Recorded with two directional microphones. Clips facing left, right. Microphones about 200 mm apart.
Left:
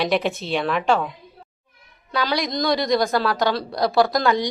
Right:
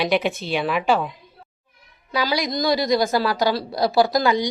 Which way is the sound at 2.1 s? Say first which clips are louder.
Even; centre (ahead or behind).